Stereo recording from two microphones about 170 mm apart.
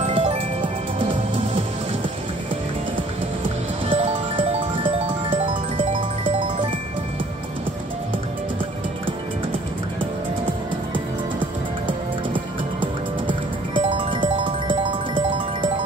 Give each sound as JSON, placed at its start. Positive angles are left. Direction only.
{"t": 0.0, "sound": "music", "side_deg": -35}
{"t": 3.9, "sound": "music", "side_deg": -35}
{"t": 12.8, "sound": "music", "side_deg": -30}